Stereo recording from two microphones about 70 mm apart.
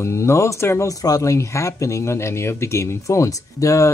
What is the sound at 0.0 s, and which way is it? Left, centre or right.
Speech, left.